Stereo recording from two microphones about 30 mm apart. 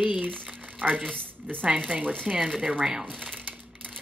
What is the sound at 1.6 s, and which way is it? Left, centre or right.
Speech, right.